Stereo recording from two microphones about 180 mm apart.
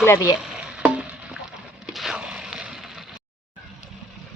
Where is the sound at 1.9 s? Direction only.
Centre (ahead or behind).